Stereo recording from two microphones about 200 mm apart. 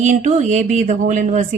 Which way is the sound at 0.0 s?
40° right (ahead or behind).